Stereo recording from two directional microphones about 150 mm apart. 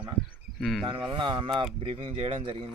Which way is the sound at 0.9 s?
35° right (ahead or behind).